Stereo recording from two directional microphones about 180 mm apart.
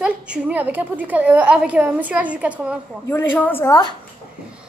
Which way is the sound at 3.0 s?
10° left (ahead or behind).